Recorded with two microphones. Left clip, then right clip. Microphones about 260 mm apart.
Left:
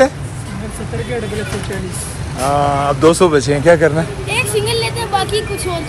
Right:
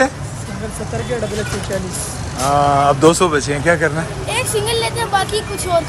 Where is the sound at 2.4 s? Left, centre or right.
Centre.